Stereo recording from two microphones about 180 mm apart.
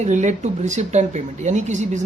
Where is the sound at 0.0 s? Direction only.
40° right (ahead or behind).